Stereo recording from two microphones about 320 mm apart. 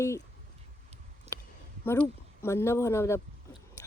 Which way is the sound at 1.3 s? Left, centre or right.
Centre.